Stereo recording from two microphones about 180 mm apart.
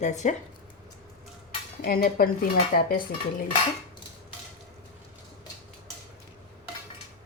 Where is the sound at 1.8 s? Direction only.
55° left (ahead or behind).